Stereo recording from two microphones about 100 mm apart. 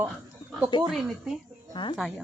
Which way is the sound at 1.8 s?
50° left (ahead or behind).